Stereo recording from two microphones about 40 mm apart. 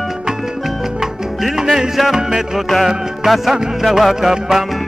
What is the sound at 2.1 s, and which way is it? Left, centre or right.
Music, centre.